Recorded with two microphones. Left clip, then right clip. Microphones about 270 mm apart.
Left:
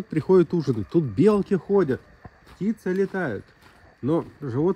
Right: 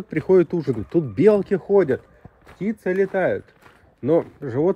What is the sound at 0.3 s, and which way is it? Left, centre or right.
Speech, centre.